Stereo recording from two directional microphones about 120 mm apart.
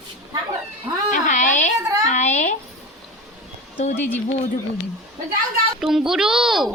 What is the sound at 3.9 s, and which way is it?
Speech, 15° left (ahead or behind).